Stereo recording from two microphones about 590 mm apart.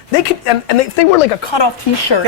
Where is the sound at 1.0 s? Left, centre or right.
Left.